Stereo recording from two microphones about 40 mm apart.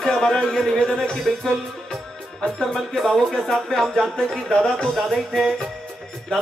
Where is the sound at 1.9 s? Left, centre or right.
Centre.